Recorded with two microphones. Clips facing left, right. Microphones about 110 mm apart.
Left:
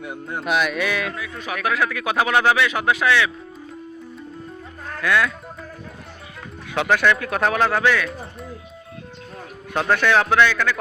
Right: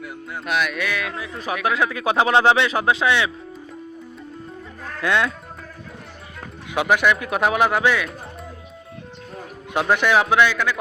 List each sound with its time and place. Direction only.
0.0 s speech: 30° left (ahead or behind)
0.4 s speech: centre (ahead or behind)
1.1 s speech: 30° right (ahead or behind)
4.9 s speech: 25° right (ahead or behind)
6.7 s speech: 15° right (ahead or behind)
9.7 s speech: 15° right (ahead or behind)